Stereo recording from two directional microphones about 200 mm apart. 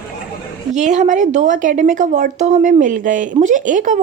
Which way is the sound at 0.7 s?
35° right (ahead or behind).